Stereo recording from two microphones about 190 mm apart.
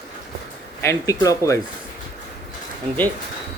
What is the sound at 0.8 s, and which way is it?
Speech, 15° left (ahead or behind).